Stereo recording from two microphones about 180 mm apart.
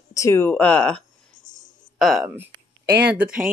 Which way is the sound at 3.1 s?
10° right (ahead or behind).